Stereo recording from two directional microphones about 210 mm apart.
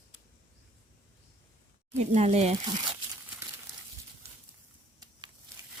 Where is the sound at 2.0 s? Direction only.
30° right (ahead or behind).